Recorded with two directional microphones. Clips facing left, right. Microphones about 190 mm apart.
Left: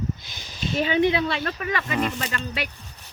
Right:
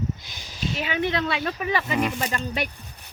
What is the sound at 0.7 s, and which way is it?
Speech, 35° left (ahead or behind).